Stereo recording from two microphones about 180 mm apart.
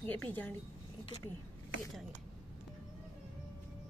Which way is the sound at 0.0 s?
10° left (ahead or behind).